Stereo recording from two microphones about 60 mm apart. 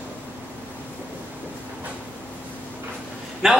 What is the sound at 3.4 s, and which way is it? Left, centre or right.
Speech, centre.